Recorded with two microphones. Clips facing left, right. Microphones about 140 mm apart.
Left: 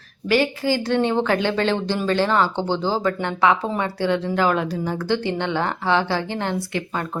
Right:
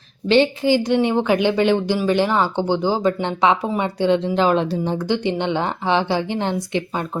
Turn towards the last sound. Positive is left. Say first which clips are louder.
# right 3 dB
turn(degrees=-20)  # may be behind; listen again after turning